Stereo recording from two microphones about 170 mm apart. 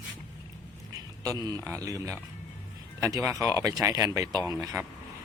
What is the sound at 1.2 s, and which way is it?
Speech, 20° right (ahead or behind).